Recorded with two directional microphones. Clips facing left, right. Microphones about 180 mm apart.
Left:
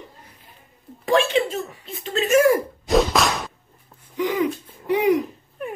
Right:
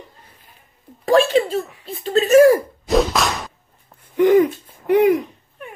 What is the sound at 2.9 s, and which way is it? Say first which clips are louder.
Whip: right 1 dB; centre (ahead or behind).